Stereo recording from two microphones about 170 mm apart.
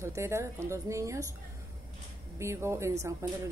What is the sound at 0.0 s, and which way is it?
Speech, 15° right (ahead or behind).